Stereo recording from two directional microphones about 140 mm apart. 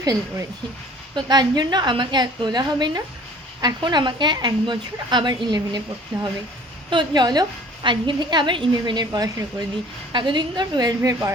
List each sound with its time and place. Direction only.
0.0 s a woman's voice: 25° right (ahead or behind)
6.9 s a woman's voice: 30° right (ahead or behind)